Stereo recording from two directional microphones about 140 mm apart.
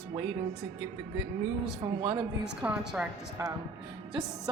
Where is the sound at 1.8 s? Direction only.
35° right (ahead or behind).